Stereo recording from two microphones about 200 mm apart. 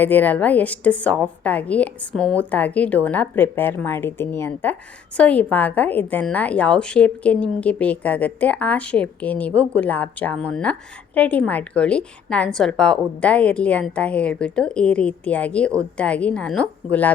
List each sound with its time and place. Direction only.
0.0 s a woman's voice: 10° left (ahead or behind)